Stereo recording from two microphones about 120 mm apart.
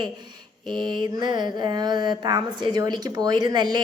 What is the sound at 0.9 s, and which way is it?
Mantra, 40° right (ahead or behind).